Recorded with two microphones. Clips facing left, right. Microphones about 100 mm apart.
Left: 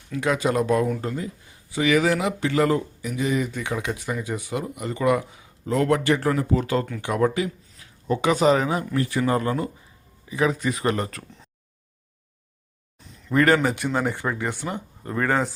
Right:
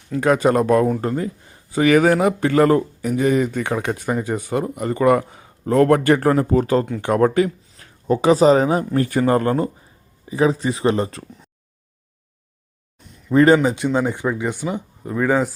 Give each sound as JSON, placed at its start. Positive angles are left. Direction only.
{"t": 0.1, "sound": "speech", "side_deg": -45}
{"t": 7.0, "sound": "speech", "side_deg": -50}
{"t": 9.0, "sound": "speech", "side_deg": -45}
{"t": 10.2, "sound": "speech", "side_deg": -30}
{"t": 13.3, "sound": "speech", "side_deg": -20}